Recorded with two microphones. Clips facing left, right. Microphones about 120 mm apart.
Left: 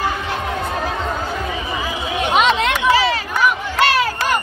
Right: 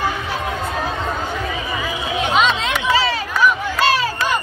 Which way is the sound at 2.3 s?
55° left (ahead or behind).